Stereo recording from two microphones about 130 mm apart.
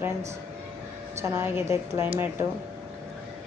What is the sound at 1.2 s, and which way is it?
Speech, 20° right (ahead or behind).